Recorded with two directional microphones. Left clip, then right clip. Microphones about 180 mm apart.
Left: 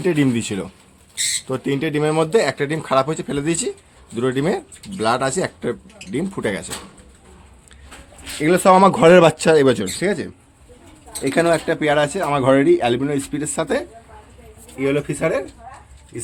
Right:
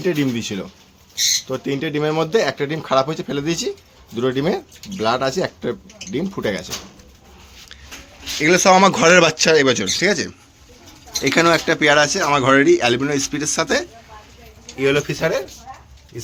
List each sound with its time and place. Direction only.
0.0 s speech: 20° left (ahead or behind)
8.4 s speech: 15° left (ahead or behind)
10.0 s speech: 5° left (ahead or behind)